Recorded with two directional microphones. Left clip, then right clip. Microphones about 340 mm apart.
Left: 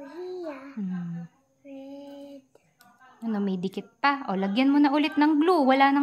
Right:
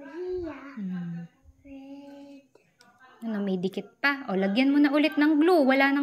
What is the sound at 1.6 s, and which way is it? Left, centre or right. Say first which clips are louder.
Child singing: left 3 dB; centre.